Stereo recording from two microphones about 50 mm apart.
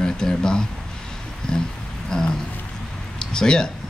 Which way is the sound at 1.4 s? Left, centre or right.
Centre.